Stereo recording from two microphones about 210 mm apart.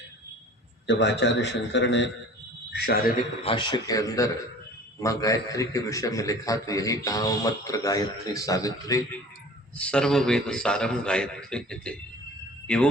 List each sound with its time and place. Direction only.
0.9 s a man's voice: 60° left (ahead or behind)
2.7 s a man's voice: 45° left (ahead or behind)
3.4 s a man's voice: 25° left (ahead or behind)
9.7 s a man's voice: 5° left (ahead or behind)